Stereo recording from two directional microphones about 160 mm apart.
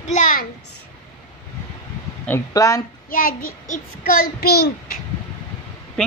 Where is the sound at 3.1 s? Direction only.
60° left (ahead or behind); by 5.0 s 90° left.